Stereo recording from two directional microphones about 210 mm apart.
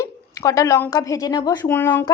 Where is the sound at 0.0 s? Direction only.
15° left (ahead or behind).